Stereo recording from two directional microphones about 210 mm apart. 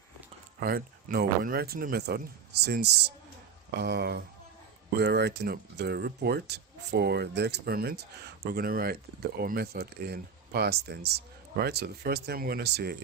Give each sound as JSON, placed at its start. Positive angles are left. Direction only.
{"t": 0.6, "sound": "speech", "side_deg": -45}